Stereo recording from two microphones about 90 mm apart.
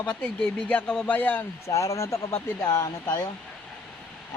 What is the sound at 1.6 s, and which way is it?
Speech, 35° left (ahead or behind).